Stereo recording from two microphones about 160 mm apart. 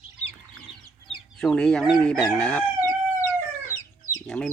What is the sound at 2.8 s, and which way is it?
Chicken, 20° left (ahead or behind).